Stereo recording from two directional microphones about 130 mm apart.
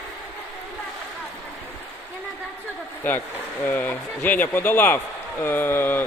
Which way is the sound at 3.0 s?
15° left (ahead or behind).